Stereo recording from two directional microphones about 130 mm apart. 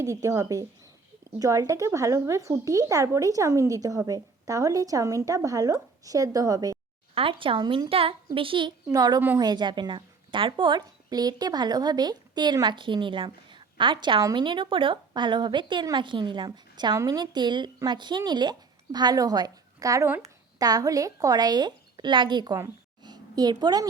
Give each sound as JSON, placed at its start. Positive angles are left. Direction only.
{"t": 0.0, "sound": "speech", "side_deg": -25}
{"t": 7.1, "sound": "speech", "side_deg": -45}
{"t": 8.9, "sound": "speech", "side_deg": -30}
{"t": 23.0, "sound": "a sound", "side_deg": -30}